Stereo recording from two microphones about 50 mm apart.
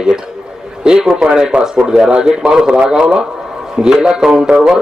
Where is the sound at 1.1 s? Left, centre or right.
Centre.